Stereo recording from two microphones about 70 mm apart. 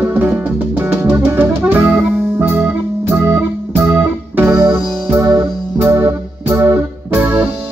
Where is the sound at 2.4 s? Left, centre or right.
Right.